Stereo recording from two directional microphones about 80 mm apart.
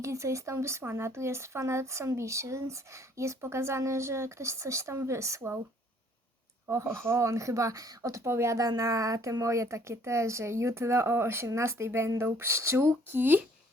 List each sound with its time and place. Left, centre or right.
0.0 s speech: right
6.7 s speech: right